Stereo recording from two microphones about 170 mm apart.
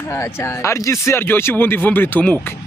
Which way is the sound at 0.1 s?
15° left (ahead or behind).